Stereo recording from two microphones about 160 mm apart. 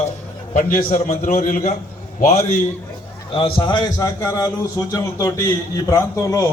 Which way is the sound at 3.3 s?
30° left (ahead or behind).